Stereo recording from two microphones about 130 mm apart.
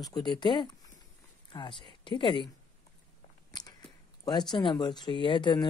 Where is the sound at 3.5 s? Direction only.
30° left (ahead or behind).